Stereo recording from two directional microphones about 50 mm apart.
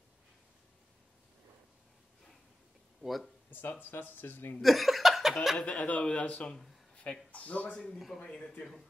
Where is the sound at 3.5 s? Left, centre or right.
Left.